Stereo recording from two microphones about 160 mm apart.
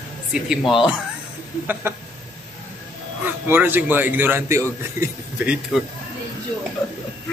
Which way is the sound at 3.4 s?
15° right (ahead or behind).